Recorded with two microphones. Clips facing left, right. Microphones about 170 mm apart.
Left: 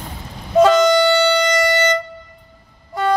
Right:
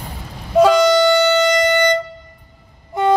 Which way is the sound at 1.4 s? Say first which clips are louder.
Right 2 dB; 20° right (ahead or behind).